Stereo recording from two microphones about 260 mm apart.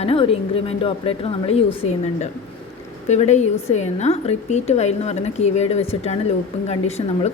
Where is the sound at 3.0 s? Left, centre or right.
Left.